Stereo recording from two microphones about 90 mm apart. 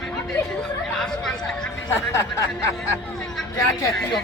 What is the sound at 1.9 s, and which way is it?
Speech, 30° left (ahead or behind).